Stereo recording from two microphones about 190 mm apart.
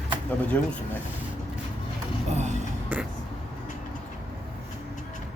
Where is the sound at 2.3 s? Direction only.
35° right (ahead or behind).